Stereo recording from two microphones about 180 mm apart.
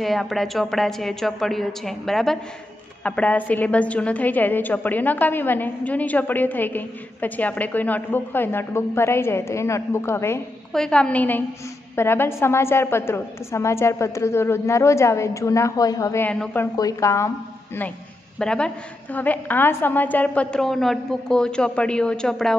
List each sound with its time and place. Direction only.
0.0 s a woman's voice: centre (ahead or behind); by 17.3 s 15° left (ahead or behind)
18.4 s a woman's voice: 5° left (ahead or behind)